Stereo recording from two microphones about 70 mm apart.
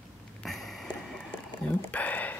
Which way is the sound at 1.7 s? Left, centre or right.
Left.